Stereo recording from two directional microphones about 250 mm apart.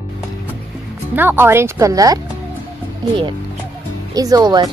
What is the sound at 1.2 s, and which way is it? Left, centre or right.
Speech, centre.